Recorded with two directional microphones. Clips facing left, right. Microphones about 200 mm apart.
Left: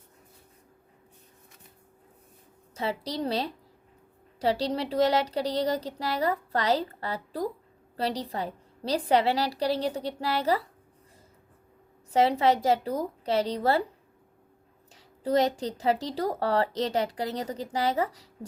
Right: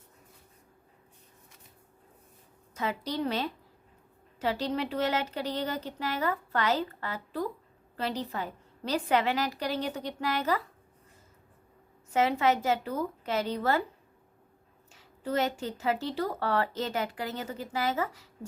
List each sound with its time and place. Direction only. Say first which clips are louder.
2.7 s a woman's voice: left 1 dB; 30° left (ahead or behind)
12.1 s a woman's voice: left 3 dB; 35° left (ahead or behind)
14.9 s a woman's voice: left 5 dB; 35° left (ahead or behind)